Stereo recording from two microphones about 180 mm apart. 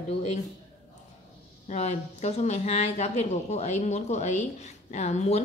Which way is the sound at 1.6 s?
40° left (ahead or behind).